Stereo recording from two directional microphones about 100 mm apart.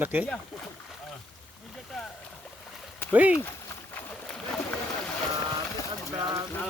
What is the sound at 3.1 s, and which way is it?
Speech, 15° right (ahead or behind).